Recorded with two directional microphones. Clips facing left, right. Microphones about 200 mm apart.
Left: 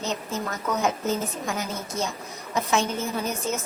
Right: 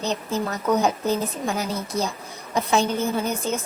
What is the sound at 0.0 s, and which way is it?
A woman's voice, 35° right (ahead or behind).